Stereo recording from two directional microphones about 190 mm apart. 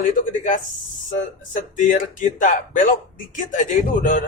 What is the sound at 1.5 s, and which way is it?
A man's voice, 45° left (ahead or behind).